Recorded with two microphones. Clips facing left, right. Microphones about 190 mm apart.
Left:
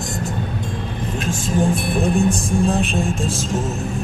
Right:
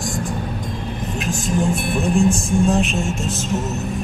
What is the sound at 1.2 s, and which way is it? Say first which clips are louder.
Music: left 1 dB; 30° left (ahead or behind).